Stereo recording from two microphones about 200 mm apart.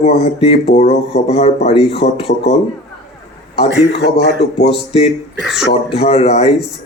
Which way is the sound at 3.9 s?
55° left (ahead or behind).